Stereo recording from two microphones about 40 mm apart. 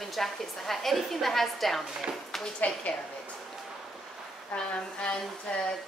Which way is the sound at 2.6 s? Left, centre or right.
Left.